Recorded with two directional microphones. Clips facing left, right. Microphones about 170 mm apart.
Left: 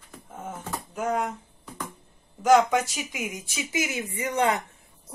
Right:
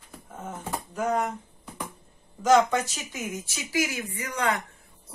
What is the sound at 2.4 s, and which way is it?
Speech, 10° left (ahead or behind).